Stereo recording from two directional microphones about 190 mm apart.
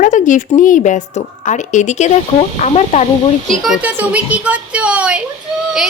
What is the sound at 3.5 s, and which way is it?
A woman's voice, centre (ahead or behind).